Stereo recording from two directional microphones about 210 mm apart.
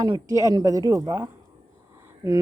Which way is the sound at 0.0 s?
15° right (ahead or behind).